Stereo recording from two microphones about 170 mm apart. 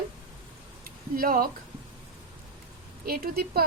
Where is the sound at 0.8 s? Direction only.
60° right (ahead or behind).